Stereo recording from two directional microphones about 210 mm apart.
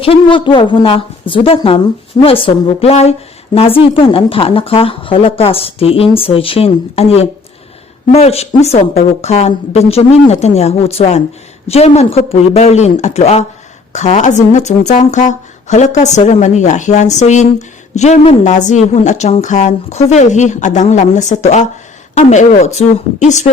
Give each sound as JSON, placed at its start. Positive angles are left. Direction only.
{"t": 0.0, "sound": "a woman's voice", "side_deg": 25}